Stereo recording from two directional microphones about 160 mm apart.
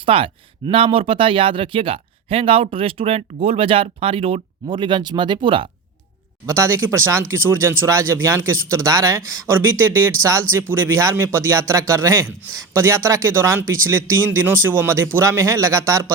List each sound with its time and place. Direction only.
0.0 s speech: 35° right (ahead or behind)
6.4 s speech: 15° right (ahead or behind)